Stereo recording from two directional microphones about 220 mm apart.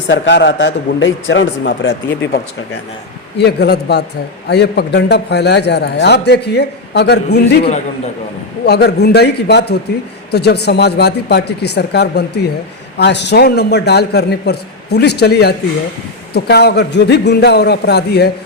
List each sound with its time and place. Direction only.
0.1 s a man's voice: 55° left (ahead or behind)
7.6 s a man's voice: 30° left (ahead or behind)
8.6 s a man's voice: 50° left (ahead or behind)